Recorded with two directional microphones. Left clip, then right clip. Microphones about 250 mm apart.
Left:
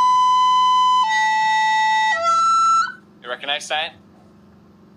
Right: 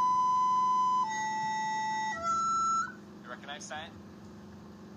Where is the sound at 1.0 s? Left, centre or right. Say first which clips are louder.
Left 15 dB; left.